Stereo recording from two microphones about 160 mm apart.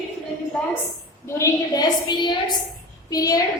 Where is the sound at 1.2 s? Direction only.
15° left (ahead or behind).